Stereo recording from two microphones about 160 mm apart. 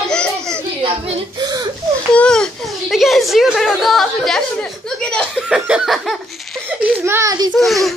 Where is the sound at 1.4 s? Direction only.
25° right (ahead or behind).